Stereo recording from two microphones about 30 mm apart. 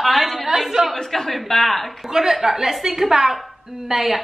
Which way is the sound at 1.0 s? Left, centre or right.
Centre.